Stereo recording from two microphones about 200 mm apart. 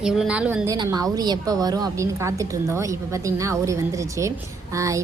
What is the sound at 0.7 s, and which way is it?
A woman's voice, 20° right (ahead or behind).